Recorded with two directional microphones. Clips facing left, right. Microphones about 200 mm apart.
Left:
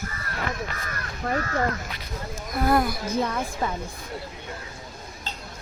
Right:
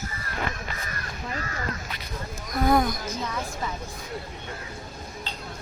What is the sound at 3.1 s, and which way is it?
Speech, 55° left (ahead or behind).